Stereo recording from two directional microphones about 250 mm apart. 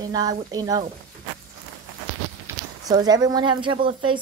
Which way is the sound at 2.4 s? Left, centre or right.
Centre.